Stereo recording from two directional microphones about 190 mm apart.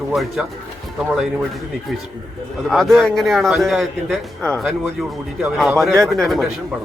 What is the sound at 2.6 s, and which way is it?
A man's voice, centre (ahead or behind).